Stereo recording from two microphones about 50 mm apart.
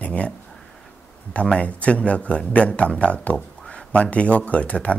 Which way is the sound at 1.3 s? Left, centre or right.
Left.